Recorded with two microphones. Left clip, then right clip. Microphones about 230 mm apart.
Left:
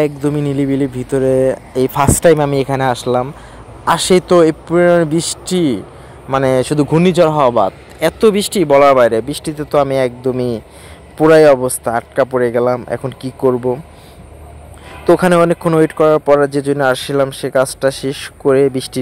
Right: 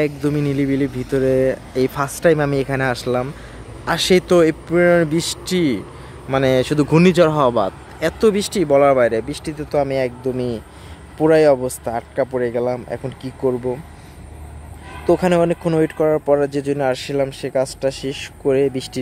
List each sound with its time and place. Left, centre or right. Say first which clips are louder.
0.0 s speech: left 4 dB; centre
15.1 s speech: left 5 dB; centre